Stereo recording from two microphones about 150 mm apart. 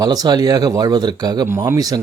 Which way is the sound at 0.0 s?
25° right (ahead or behind).